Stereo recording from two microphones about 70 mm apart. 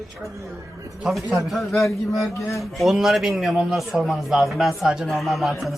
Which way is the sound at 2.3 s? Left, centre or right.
Left.